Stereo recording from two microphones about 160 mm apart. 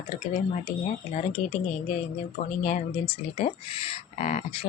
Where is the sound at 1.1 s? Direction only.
40° left (ahead or behind).